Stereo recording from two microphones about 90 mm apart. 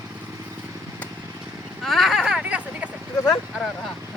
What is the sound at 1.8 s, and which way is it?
Vehicle, centre (ahead or behind).